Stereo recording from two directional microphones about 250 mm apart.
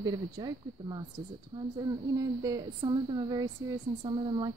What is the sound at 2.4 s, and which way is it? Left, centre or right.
Speech, centre.